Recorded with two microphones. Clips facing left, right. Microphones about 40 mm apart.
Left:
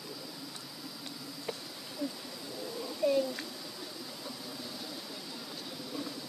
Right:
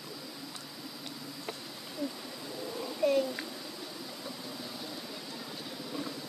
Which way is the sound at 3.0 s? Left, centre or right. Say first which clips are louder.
Right 1 dB; right.